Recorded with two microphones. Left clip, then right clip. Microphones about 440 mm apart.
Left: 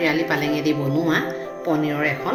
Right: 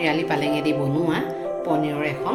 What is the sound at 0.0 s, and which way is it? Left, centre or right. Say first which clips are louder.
A woman's voice: left 1 dB; centre.